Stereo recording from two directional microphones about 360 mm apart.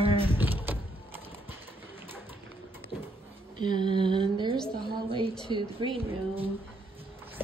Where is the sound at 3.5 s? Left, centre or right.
Centre.